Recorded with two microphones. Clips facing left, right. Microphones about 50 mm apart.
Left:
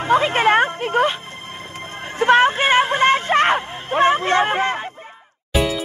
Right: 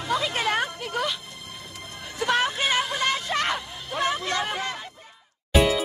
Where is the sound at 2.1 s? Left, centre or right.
Left.